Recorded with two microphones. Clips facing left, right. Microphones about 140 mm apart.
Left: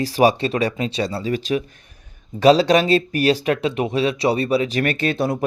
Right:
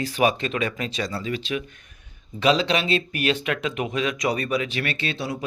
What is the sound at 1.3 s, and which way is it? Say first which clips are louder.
Speech: left 6 dB; 40° left (ahead or behind).